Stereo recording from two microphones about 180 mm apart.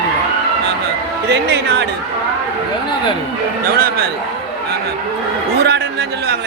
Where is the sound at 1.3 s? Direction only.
70° right (ahead or behind).